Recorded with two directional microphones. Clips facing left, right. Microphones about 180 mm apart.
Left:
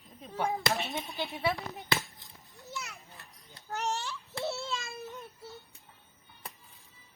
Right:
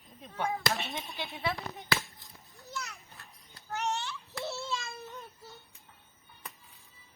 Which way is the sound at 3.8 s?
40° left (ahead or behind).